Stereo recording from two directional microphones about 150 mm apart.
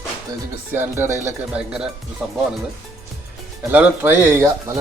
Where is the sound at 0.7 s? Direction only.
15° right (ahead or behind).